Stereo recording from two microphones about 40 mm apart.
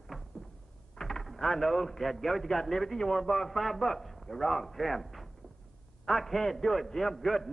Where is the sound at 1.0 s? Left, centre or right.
Centre.